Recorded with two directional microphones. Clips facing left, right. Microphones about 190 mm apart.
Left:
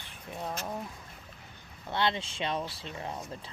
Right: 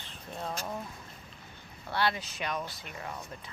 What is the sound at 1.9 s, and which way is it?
Speech, 20° left (ahead or behind).